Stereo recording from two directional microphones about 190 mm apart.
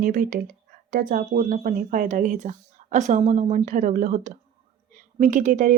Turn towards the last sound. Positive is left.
turn(degrees=-45)  # may be behind; listen again after turning